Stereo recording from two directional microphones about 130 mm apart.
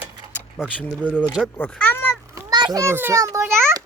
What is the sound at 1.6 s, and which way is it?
Speech, 15° left (ahead or behind).